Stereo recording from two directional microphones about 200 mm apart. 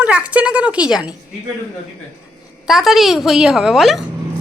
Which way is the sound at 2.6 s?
Centre (ahead or behind).